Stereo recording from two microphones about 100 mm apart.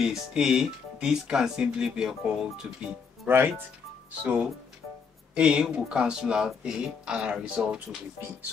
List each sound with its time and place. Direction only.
0.0 s speech: 5° right (ahead or behind)
3.3 s speech: 20° right (ahead or behind)